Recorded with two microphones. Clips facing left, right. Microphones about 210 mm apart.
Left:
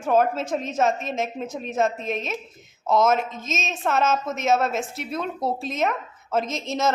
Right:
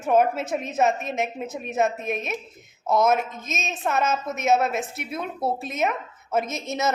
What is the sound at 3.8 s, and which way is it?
A woman's voice, centre (ahead or behind).